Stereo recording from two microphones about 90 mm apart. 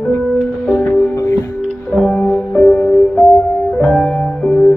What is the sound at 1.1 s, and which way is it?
Music, 35° left (ahead or behind).